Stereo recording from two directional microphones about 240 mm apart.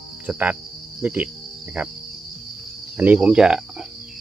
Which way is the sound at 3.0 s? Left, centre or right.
Centre.